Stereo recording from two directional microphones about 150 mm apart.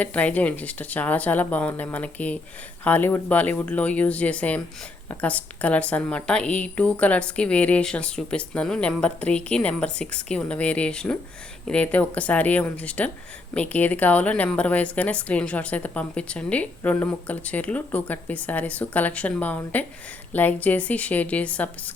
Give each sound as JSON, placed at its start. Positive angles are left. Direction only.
{"t": 0.0, "sound": "a woman's voice", "side_deg": 10}